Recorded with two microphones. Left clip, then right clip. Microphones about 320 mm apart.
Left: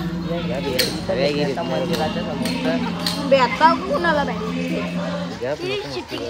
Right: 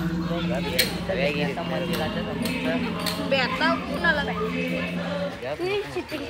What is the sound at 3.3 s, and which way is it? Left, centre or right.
Speech, left.